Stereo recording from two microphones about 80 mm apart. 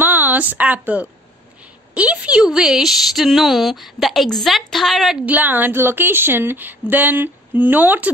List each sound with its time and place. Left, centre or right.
0.0 s a sound: right
2.0 s a woman's voice: centre
5.2 s a woman's voice: right